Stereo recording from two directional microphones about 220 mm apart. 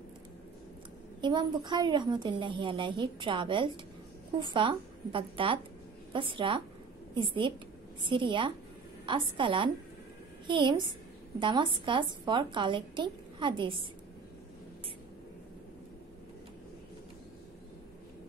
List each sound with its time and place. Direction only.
1.2 s a woman's voice: 20° right (ahead or behind)